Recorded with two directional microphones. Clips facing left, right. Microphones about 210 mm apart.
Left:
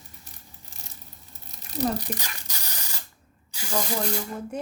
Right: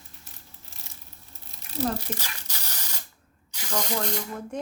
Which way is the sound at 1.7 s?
15° left (ahead or behind).